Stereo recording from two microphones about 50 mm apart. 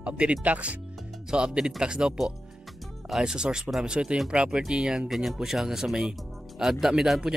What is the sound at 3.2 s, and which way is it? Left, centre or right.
Speech, centre.